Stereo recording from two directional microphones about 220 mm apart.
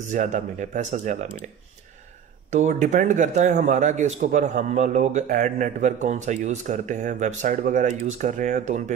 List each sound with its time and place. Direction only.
0.1 s a man's voice: 35° right (ahead or behind)
2.5 s a man's voice: 30° right (ahead or behind)